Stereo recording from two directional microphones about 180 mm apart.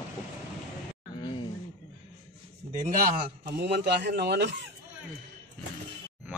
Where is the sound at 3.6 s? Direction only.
70° right (ahead or behind).